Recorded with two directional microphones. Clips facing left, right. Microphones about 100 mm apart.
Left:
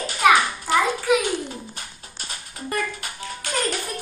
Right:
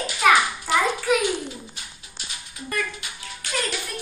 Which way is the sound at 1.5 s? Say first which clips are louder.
Left 3 dB; 45° left (ahead or behind).